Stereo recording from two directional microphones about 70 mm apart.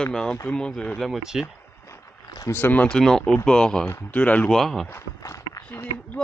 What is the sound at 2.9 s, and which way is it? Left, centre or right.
Speech, centre.